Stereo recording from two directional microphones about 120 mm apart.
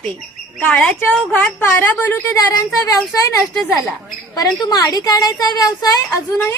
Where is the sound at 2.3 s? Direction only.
30° left (ahead or behind).